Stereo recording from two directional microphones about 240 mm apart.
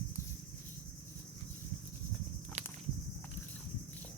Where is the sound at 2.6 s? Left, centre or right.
Right.